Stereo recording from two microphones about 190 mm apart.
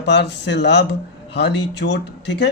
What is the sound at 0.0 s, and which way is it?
A man's voice, 65° left (ahead or behind).